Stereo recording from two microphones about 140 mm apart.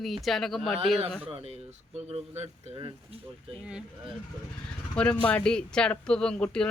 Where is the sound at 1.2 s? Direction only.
45° right (ahead or behind).